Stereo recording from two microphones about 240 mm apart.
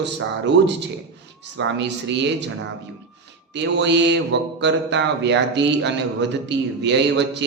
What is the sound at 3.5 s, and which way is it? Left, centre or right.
A man's voice, right.